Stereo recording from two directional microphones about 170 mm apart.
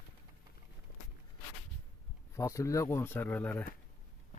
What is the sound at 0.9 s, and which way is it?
Walk, 50° left (ahead or behind).